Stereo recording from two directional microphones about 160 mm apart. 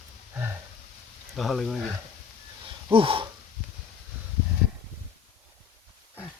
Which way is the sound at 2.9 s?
35° right (ahead or behind).